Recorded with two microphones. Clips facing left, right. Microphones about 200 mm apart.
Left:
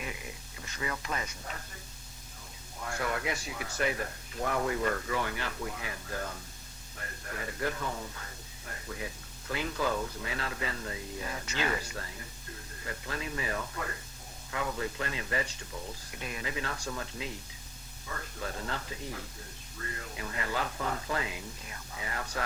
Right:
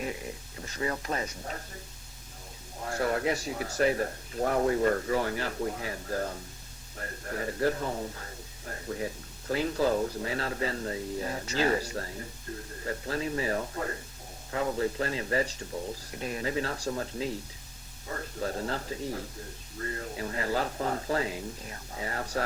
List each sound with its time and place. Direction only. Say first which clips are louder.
0.0 s speech: right 6 dB; 35° right (ahead or behind)
2.8 s speech: right 5 dB; 35° right (ahead or behind)